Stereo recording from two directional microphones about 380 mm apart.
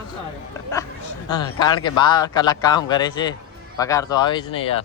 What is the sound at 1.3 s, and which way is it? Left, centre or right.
Speech, centre.